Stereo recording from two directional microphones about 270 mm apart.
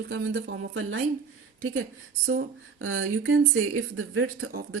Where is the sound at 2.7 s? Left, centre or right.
Right.